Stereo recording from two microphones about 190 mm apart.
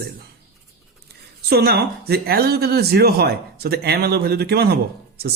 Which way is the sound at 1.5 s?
55° right (ahead or behind).